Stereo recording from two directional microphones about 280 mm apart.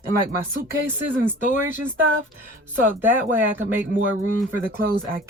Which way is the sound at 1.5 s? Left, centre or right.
Left.